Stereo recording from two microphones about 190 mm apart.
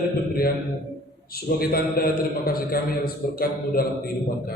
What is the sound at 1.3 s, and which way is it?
A man's voice, 55° left (ahead or behind).